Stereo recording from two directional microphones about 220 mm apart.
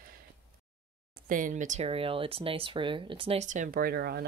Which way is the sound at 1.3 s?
35° right (ahead or behind).